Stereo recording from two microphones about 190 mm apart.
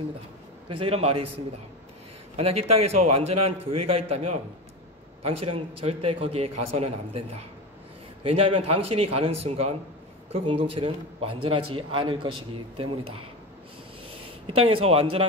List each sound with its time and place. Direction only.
0.7 s a man's voice: 30° right (ahead or behind)
2.3 s a man's voice: 35° right (ahead or behind)
14.4 s a man's voice: 30° right (ahead or behind)